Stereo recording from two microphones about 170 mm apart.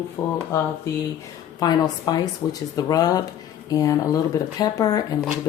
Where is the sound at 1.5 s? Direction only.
20° left (ahead or behind).